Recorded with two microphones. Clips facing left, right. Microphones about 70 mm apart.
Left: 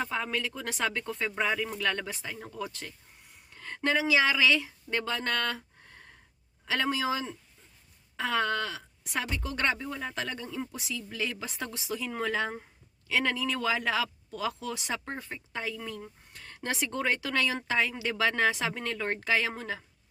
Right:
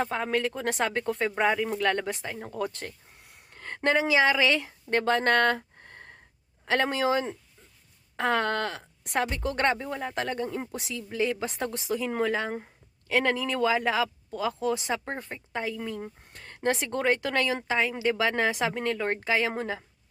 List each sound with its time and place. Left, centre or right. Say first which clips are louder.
0.0 s speech: right 5 dB; right
2.5 s speech: right 6 dB; right
9.8 s speech: right 3 dB; right
10.2 s speech: right 5 dB; right
11.1 s speech: right 9 dB; right
16.0 s a sound: right 5 dB; right
16.6 s speech: right 5 dB; right